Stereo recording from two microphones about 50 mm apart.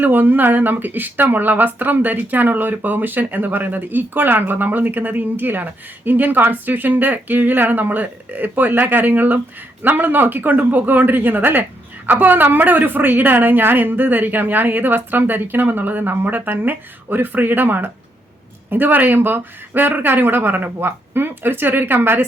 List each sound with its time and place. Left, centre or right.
0.0 s a woman's voice: right